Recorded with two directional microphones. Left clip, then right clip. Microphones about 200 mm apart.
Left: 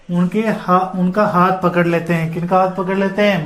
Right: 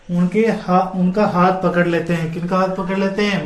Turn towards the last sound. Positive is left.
turn(degrees=35)  # may be behind; listen again after turning